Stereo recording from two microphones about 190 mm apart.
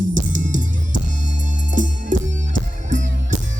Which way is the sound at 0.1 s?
40° right (ahead or behind).